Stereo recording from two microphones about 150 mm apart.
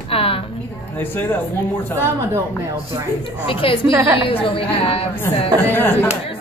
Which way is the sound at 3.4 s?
35° left (ahead or behind).